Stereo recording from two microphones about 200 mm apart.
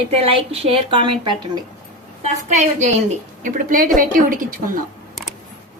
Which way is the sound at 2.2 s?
35° right (ahead or behind).